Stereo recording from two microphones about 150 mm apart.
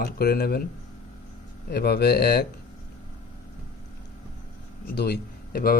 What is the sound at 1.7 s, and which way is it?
Speech, 90° left.